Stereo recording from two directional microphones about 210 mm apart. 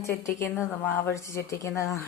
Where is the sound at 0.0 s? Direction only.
15° left (ahead or behind).